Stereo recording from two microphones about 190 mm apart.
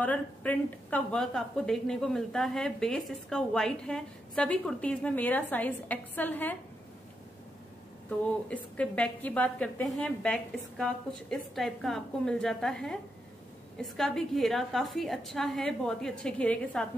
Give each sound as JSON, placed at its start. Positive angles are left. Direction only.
{"t": 0.0, "sound": "a woman's voice", "side_deg": 10}
{"t": 8.7, "sound": "a woman's voice", "side_deg": 5}